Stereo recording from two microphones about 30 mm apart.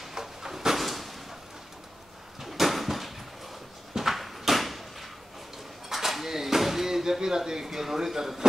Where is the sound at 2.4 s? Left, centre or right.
Centre.